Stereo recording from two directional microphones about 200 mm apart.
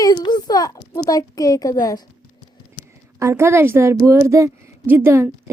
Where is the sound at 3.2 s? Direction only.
15° right (ahead or behind).